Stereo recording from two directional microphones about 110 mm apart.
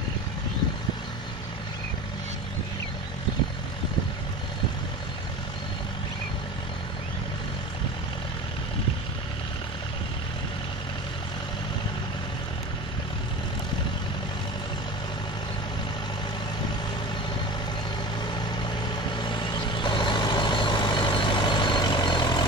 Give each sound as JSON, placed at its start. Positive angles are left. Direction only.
{"t": 18.3, "sound": "vehicle", "side_deg": 45}